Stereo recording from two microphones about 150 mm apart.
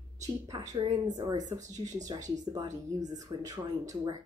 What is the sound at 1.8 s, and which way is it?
Speech, 25° right (ahead or behind).